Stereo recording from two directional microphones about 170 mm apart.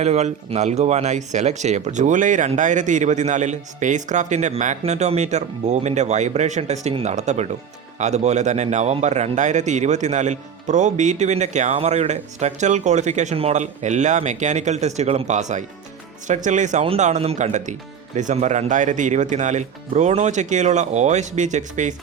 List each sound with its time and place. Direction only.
0.0 s a man's voice: 40° right (ahead or behind)